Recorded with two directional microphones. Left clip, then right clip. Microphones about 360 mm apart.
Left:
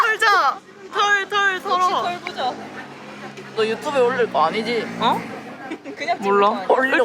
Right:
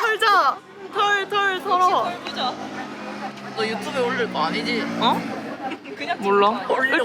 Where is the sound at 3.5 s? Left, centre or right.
Centre.